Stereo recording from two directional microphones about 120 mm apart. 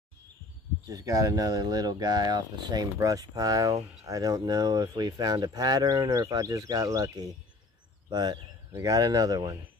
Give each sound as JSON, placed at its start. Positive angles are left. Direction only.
{"t": 0.8, "sound": "speech", "side_deg": -30}